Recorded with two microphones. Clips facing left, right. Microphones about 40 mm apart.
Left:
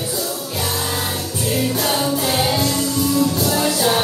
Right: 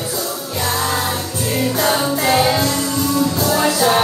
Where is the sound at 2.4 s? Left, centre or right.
Right.